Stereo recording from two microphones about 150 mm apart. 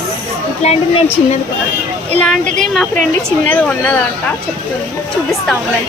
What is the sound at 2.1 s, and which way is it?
Speech, 5° left (ahead or behind).